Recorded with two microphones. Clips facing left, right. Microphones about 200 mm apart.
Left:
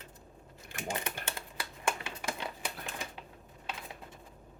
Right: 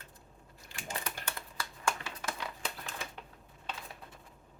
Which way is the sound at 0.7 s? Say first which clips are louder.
Left 6 dB; 55° left (ahead or behind).